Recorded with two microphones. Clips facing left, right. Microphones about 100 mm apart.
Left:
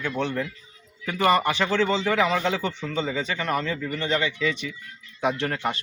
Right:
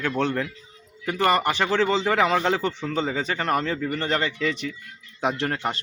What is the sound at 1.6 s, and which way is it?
Speech, 35° right (ahead or behind).